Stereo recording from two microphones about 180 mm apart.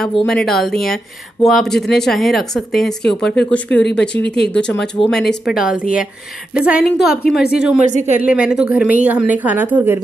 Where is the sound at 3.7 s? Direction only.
70° left (ahead or behind).